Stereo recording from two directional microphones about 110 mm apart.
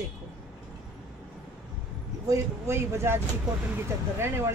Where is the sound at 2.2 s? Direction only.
25° right (ahead or behind).